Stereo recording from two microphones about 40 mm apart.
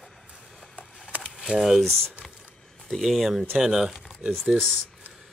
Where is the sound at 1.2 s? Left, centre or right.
Centre.